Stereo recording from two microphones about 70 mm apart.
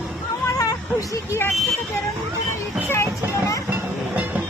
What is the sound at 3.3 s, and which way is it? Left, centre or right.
Vehicle, left.